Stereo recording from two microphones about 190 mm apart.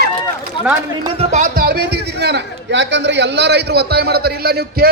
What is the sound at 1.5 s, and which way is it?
A man's voice, 55° right (ahead or behind).